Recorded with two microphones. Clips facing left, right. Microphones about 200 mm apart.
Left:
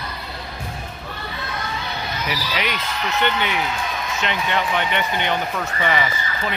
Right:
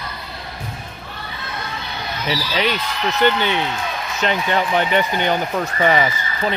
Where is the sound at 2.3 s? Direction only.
30° right (ahead or behind).